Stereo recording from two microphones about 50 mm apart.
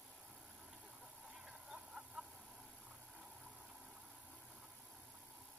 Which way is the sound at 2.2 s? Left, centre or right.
Right.